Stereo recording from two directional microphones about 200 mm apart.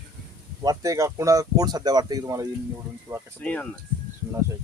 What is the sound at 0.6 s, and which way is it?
Speech, 15° right (ahead or behind).